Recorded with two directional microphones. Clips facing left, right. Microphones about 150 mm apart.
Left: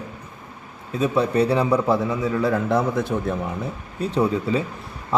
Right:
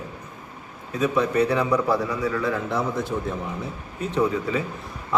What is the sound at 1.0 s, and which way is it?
A man's voice, 30° left (ahead or behind).